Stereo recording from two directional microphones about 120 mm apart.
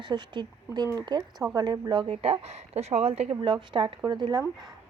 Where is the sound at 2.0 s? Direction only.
55° right (ahead or behind).